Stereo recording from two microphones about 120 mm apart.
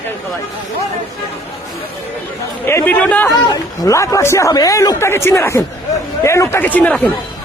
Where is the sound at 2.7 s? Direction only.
15° left (ahead or behind).